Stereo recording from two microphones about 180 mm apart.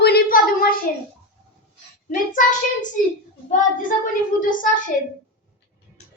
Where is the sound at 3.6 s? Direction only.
50° left (ahead or behind).